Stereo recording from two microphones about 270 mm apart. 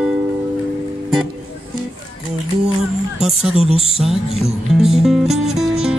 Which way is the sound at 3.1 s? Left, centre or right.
Centre.